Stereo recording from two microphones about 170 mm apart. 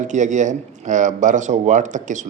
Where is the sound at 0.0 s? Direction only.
45° right (ahead or behind).